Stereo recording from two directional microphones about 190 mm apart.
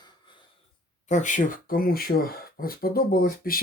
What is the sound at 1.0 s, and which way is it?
Speech, 40° left (ahead or behind).